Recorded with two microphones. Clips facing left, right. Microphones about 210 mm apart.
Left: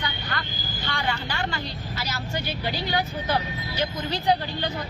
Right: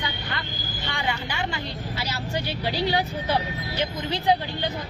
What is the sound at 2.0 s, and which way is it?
Speech, 30° right (ahead or behind).